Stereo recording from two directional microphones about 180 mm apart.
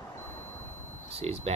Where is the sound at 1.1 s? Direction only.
35° right (ahead or behind).